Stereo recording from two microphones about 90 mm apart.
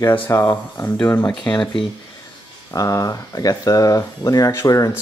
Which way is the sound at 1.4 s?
55° left (ahead or behind).